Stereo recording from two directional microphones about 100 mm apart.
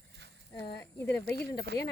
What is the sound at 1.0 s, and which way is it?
Speech, 20° left (ahead or behind).